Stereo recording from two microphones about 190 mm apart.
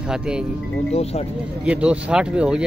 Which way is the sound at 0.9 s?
35° left (ahead or behind).